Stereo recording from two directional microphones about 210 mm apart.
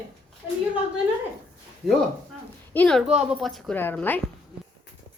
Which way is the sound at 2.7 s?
5° left (ahead or behind).